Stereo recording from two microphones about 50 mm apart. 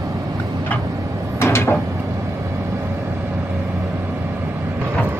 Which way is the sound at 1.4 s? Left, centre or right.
Left.